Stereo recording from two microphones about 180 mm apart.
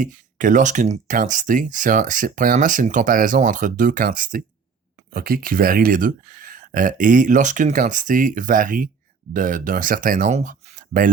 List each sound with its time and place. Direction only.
0.0 s speech: 45° right (ahead or behind)